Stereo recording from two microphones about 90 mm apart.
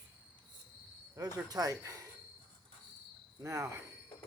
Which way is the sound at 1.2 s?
40° right (ahead or behind).